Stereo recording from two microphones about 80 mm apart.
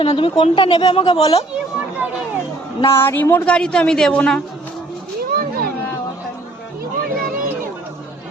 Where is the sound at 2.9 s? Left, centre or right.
Left.